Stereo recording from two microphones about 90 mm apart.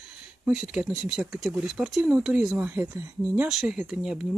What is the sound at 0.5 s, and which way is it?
Speech, 10° right (ahead or behind).